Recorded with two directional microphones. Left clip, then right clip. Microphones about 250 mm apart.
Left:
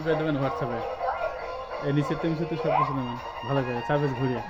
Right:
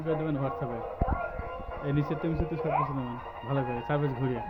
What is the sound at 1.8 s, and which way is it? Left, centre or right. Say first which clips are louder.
Speech: left 4 dB; left.